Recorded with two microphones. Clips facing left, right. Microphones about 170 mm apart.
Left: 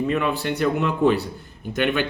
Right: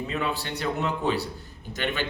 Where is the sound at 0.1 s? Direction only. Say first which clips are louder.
Left 7 dB; 60° left (ahead or behind).